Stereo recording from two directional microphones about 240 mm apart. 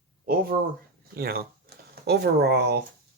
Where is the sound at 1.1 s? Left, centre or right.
Right.